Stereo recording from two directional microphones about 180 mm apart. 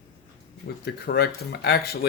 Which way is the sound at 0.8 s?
65° left (ahead or behind).